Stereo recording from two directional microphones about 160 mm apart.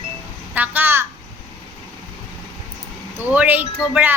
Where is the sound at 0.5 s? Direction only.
10° right (ahead or behind).